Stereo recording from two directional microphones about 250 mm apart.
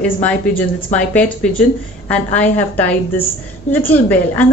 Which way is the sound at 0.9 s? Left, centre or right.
Centre.